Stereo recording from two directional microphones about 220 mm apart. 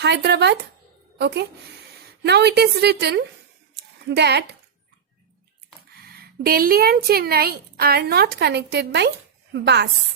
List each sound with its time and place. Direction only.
0.0 s a woman's voice: 50° right (ahead or behind)
3.8 s a sound: 50° right (ahead or behind)
6.1 s speech: 45° right (ahead or behind)